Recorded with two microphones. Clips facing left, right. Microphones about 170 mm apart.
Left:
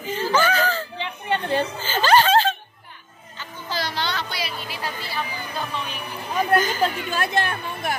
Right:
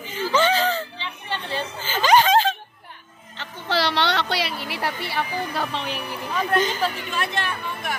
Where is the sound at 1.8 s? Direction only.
15° right (ahead or behind).